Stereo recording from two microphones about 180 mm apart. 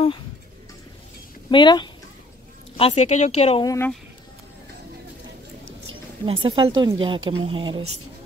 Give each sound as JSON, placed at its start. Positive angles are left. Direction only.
{"t": 1.5, "sound": "speech", "side_deg": 25}
{"t": 2.8, "sound": "speech", "side_deg": 35}
{"t": 3.6, "sound": "speech", "side_deg": 15}
{"t": 6.2, "sound": "speech", "side_deg": -30}